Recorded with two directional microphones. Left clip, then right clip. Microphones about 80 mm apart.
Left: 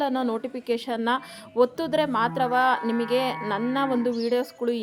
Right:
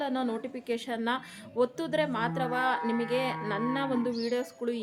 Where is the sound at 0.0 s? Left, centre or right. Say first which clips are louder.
Left 6 dB; centre.